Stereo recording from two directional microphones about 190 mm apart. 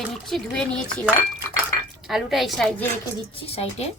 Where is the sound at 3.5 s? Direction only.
35° left (ahead or behind).